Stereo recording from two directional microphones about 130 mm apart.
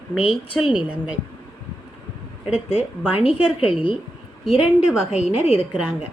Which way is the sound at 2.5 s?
45° left (ahead or behind).